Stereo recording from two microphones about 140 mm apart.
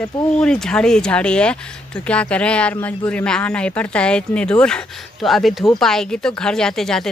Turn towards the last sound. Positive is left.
turn(degrees=5)  # may be behind; listen again after turning